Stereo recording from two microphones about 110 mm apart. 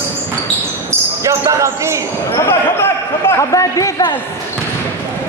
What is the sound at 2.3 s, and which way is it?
Speech, 25° left (ahead or behind).